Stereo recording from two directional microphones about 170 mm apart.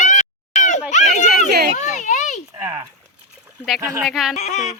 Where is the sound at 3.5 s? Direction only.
Centre (ahead or behind).